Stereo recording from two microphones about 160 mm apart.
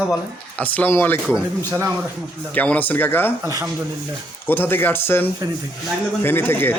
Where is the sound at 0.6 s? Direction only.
10° left (ahead or behind).